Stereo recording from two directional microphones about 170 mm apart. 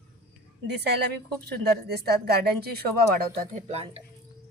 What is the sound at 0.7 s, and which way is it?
A woman's voice, 75° right (ahead or behind).